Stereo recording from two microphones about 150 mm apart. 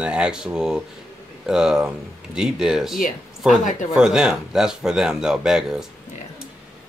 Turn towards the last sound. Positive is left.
turn(degrees=-5)  # may be behind; listen again after turning